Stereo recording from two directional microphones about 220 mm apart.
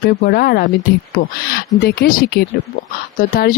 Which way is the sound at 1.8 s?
40° left (ahead or behind).